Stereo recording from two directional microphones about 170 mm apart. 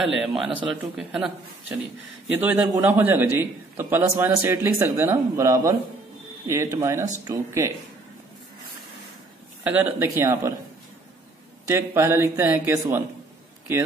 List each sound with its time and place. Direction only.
0.0 s a man's voice: centre (ahead or behind); by 7.7 s 20° right (ahead or behind)
9.6 s a man's voice: 10° right (ahead or behind)
11.6 s a man's voice: 15° right (ahead or behind)